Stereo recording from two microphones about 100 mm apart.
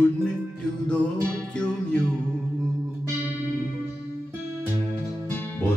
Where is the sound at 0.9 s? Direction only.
10° left (ahead or behind).